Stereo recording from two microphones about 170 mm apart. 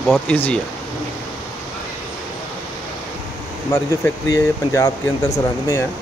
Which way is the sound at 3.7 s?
20° left (ahead or behind).